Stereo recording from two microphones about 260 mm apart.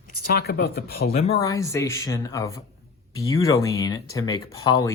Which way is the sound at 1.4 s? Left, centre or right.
Centre.